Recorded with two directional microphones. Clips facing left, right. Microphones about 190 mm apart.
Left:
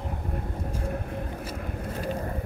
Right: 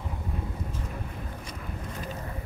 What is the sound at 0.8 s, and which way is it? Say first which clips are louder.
Vehicle: left 6 dB; 55° left (ahead or behind).